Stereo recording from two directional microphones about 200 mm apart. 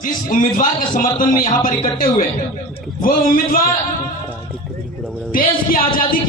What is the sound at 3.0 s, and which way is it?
Speech, 45° left (ahead or behind).